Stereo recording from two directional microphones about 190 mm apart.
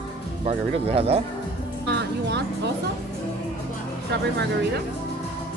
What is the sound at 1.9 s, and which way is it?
Music, 65° right (ahead or behind).